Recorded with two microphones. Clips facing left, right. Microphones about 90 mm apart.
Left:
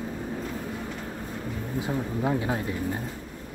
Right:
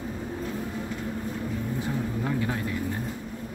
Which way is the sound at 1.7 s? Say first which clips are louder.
Left 4 dB; 20° left (ahead or behind).